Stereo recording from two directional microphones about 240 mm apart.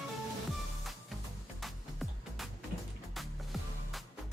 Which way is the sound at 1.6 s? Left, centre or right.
Centre.